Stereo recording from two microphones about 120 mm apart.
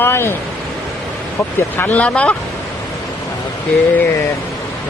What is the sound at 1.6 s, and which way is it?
Speech, 15° left (ahead or behind).